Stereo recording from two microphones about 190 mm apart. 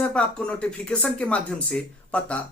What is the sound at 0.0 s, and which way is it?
Speech, 5° left (ahead or behind).